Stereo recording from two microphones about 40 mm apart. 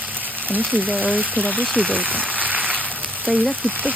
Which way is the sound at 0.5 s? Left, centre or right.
Right.